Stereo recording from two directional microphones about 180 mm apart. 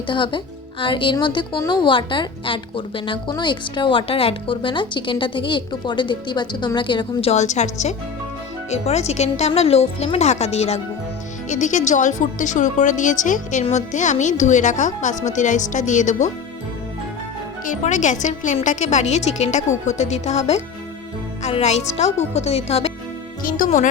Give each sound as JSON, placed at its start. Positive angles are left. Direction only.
{"t": 0.1, "sound": "a woman's voice", "side_deg": 25}
{"t": 17.7, "sound": "a woman's voice", "side_deg": 40}
{"t": 23.4, "sound": "a woman's voice", "side_deg": 50}